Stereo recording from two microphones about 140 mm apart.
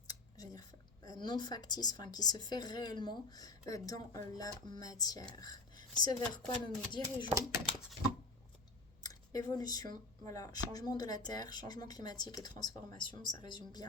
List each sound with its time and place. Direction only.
0.1 s a sound: 25° left (ahead or behind)
1.2 s speech: 30° left (ahead or behind)
9.0 s speech: 25° left (ahead or behind)